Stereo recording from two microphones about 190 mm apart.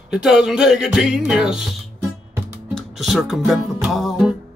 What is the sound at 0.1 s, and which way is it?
Music, 5° right (ahead or behind).